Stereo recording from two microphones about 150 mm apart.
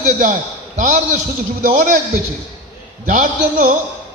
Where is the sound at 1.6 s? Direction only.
65° right (ahead or behind).